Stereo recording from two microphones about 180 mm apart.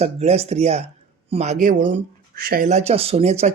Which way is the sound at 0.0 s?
35° right (ahead or behind).